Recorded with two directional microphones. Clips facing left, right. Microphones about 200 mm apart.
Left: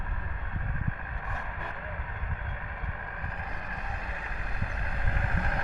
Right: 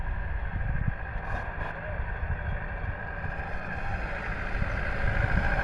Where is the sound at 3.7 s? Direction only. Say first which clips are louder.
Right 3 dB; 70° right (ahead or behind).